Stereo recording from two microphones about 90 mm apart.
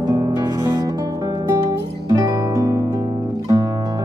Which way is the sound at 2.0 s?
40° right (ahead or behind).